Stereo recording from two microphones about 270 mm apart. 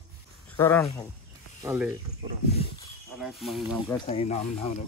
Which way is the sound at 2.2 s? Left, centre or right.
Centre.